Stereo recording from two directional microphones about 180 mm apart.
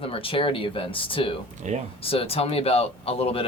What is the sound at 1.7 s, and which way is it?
Speech, 40° right (ahead or behind).